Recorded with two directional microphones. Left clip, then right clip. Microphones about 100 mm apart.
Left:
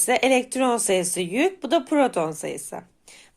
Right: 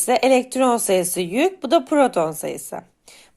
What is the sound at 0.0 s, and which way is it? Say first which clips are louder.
A woman's voice: right 3 dB; 30° right (ahead or behind).